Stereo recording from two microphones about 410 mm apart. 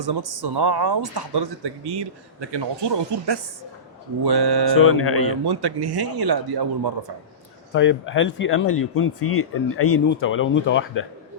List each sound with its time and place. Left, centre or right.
0.0 s speech: right
4.8 s speech: left
5.5 s speech: right
7.7 s speech: left